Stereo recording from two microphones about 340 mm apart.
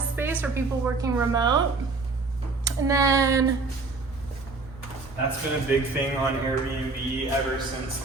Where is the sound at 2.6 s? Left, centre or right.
Centre.